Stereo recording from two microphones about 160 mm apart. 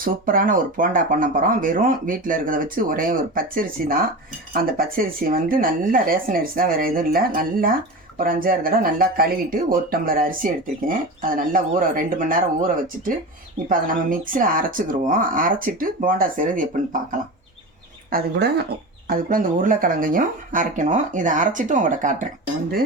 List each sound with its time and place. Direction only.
0.0 s speech: 60° right (ahead or behind)
18.1 s speech: 90° right
19.0 s speech: 60° right (ahead or behind)